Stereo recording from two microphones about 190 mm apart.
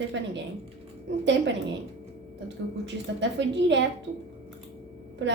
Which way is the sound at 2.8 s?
65° right (ahead or behind).